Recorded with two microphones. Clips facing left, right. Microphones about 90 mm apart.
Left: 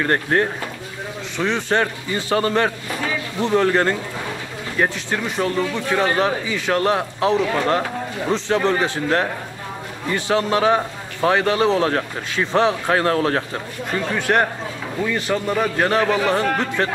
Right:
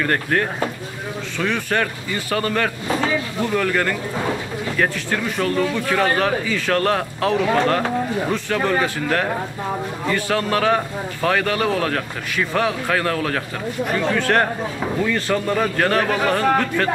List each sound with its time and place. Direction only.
0.0 s speech: 25° left (ahead or behind)
13.8 s a man's voice: 20° left (ahead or behind)